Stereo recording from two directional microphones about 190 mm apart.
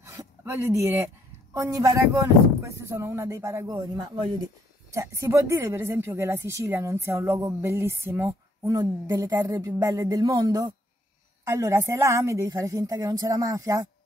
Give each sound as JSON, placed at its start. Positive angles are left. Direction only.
{"t": 0.0, "sound": "a sound", "side_deg": -15}
{"t": 1.5, "sound": "a woman's voice", "side_deg": -15}
{"t": 3.7, "sound": "speech", "side_deg": -25}
{"t": 4.9, "sound": "a woman's voice", "side_deg": -15}